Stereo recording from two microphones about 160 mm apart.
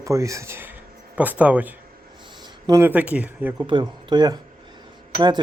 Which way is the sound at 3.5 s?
30° right (ahead or behind).